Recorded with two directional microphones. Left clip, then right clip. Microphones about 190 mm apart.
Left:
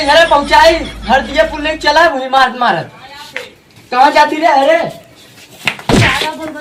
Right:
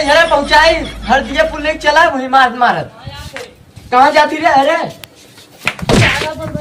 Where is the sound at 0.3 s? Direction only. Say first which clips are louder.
Left 2 dB; centre (ahead or behind).